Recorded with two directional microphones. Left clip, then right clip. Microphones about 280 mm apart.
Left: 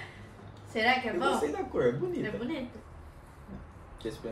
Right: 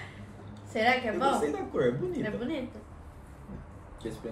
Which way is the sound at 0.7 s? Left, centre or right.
Centre.